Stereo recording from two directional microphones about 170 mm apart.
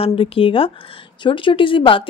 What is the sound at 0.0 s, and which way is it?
Speech, 30° left (ahead or behind).